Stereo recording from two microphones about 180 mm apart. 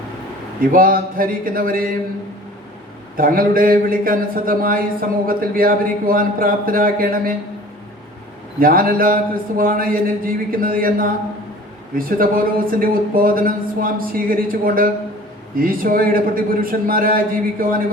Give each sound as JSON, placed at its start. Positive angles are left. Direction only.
{"t": 0.7, "sound": "speech", "side_deg": -50}
{"t": 3.2, "sound": "speech", "side_deg": -50}
{"t": 8.5, "sound": "speech", "side_deg": -50}